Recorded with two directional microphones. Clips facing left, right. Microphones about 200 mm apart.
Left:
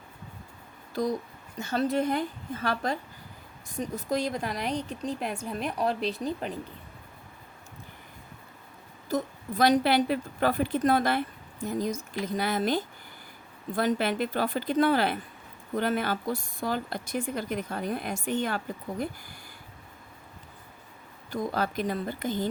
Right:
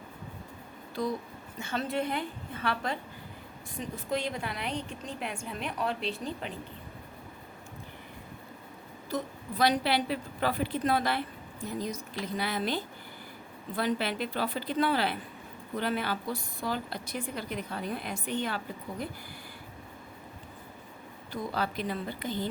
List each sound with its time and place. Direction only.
1.0 s a woman's voice: 45° left (ahead or behind)
9.0 s a woman's voice: 45° left (ahead or behind)
21.5 s a woman's voice: 45° left (ahead or behind)